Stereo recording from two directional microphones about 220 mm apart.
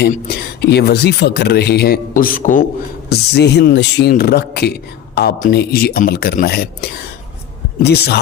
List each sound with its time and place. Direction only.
0.0 s speech: 45° left (ahead or behind)
3.1 s speech: 50° left (ahead or behind)